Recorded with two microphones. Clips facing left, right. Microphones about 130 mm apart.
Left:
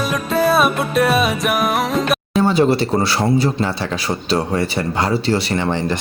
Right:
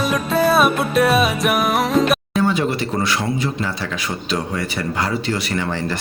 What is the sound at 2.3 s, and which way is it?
Speech, 30° left (ahead or behind).